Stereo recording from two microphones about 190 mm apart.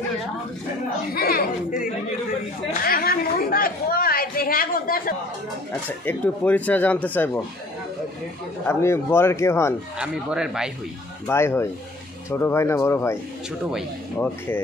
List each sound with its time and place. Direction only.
1.1 s chatter: 55° left (ahead or behind)
2.8 s a sound: 50° left (ahead or behind)
5.9 s speech: 10° left (ahead or behind)
8.6 s speech: 15° left (ahead or behind)
9.9 s speech: 5° right (ahead or behind)
11.2 s speech: 10° left (ahead or behind)